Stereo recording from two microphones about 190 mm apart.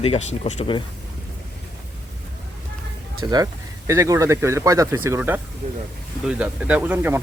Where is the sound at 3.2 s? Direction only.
20° right (ahead or behind).